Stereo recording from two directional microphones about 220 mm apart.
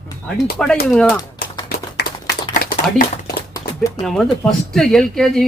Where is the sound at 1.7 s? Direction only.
45° left (ahead or behind).